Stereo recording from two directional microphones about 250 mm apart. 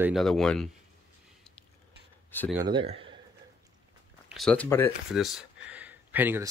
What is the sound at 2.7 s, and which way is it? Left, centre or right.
Speech, centre.